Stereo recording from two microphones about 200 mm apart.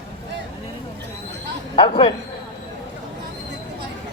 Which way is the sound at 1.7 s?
25° left (ahead or behind).